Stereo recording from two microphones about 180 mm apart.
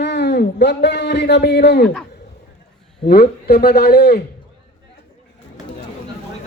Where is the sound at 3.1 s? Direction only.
60° left (ahead or behind).